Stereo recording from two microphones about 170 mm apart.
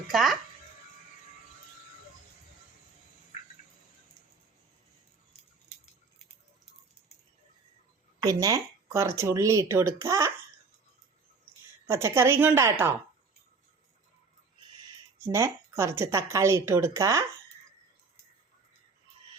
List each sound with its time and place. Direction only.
0.1 s speech: centre (ahead or behind)
8.2 s speech: 20° right (ahead or behind)
11.9 s speech: 15° right (ahead or behind)
15.3 s speech: 15° right (ahead or behind)